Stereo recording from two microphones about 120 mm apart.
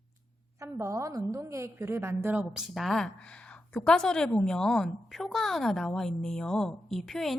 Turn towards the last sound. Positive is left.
turn(degrees=0)  # may be behind; listen again after turning